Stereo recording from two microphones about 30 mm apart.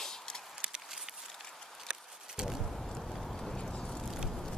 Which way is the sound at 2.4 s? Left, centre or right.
Right.